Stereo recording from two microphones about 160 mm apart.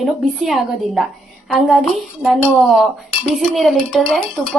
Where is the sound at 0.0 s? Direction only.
Centre (ahead or behind).